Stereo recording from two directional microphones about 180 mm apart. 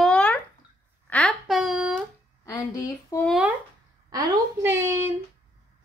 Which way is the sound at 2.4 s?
20° left (ahead or behind).